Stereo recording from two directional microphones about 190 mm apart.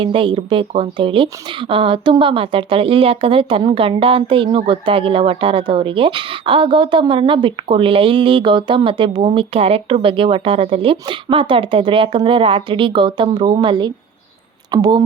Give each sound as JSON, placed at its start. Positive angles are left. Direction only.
{"t": 0.0, "sound": "speech", "side_deg": -25}